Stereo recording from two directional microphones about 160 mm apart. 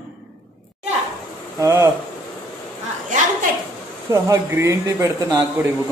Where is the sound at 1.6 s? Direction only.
15° right (ahead or behind).